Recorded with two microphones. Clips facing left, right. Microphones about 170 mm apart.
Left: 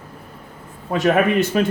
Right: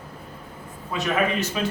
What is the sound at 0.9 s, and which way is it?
Speech, 55° left (ahead or behind).